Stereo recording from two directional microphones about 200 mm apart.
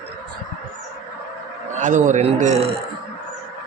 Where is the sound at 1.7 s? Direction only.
40° right (ahead or behind).